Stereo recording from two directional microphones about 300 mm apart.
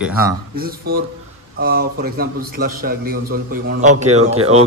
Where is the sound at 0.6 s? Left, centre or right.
Right.